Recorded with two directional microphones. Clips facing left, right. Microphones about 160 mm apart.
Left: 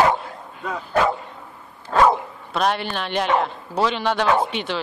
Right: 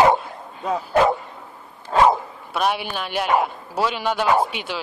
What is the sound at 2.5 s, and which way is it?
A man's voice, 5° right (ahead or behind).